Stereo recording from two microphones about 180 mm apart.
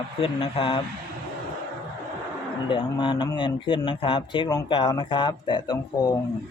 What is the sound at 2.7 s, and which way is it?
A man's voice, 25° left (ahead or behind).